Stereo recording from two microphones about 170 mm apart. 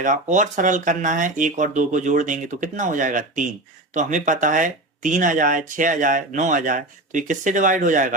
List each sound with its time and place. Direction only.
0.0 s speech: 50° right (ahead or behind)